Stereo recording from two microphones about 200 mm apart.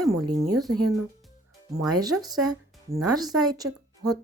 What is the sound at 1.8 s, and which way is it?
A woman's voice, 20° right (ahead or behind).